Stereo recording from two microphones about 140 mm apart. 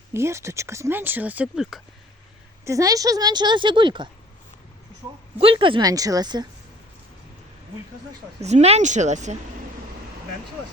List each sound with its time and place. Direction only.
0.1 s speech: 20° right (ahead or behind)
2.6 s a woman's voice: 25° right (ahead or behind)
5.4 s a woman's voice: 40° right (ahead or behind)
8.4 s speech: 50° right (ahead or behind)